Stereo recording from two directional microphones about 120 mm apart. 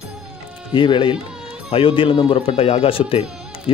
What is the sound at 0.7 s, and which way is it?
A man's voice, 40° left (ahead or behind).